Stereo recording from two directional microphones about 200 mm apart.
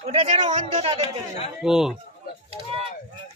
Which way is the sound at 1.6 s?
5° right (ahead or behind).